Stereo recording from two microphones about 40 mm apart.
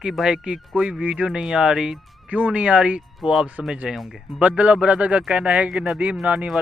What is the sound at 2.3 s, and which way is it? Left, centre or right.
Speech, right.